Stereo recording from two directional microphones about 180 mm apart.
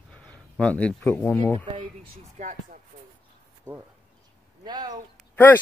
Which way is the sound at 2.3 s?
45° right (ahead or behind).